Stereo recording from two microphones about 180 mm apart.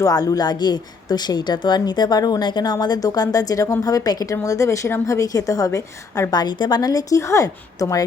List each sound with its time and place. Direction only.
0.0 s speech: 20° left (ahead or behind)